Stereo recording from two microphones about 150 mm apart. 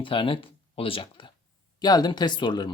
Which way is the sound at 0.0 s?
35° left (ahead or behind).